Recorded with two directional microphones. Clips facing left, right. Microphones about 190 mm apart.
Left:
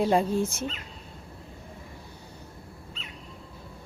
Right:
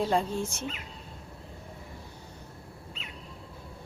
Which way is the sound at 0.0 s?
10° left (ahead or behind).